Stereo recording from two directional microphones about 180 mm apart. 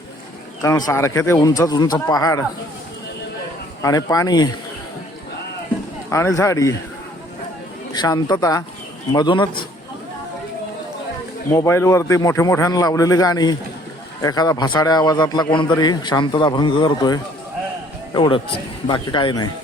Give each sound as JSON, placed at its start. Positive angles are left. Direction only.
{"t": 0.6, "sound": "a man's voice", "side_deg": 15}
{"t": 3.8, "sound": "a man's voice", "side_deg": 20}
{"t": 6.1, "sound": "a man's voice", "side_deg": 15}
{"t": 7.9, "sound": "a man's voice", "side_deg": 20}
{"t": 11.4, "sound": "a man's voice", "side_deg": 15}